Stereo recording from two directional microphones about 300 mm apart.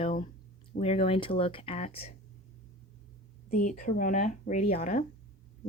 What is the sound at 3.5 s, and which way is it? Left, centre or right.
Speech, left.